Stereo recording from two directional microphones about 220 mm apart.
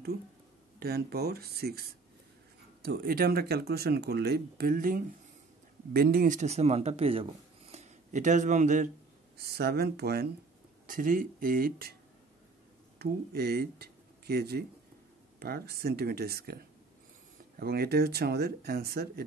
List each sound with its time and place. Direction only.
0.7 s speech: 45° right (ahead or behind)
9.4 s speech: 45° right (ahead or behind)
13.0 s speech: 45° right (ahead or behind)
17.6 s speech: 45° right (ahead or behind)